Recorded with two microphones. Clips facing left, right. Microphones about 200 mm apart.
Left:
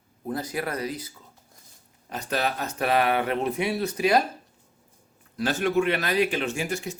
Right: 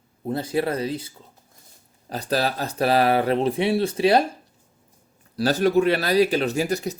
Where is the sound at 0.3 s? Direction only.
30° right (ahead or behind).